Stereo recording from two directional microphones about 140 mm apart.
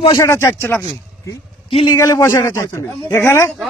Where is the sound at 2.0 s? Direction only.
20° left (ahead or behind).